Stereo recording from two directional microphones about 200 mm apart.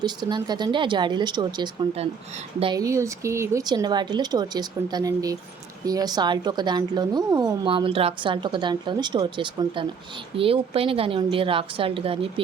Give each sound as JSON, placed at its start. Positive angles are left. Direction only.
{"t": 0.0, "sound": "speech", "side_deg": -20}